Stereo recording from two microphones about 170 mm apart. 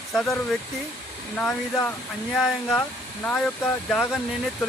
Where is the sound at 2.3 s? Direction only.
5° left (ahead or behind).